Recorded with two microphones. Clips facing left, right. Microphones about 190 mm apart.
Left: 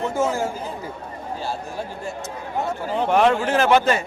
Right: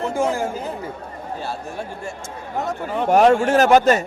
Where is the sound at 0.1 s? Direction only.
15° right (ahead or behind).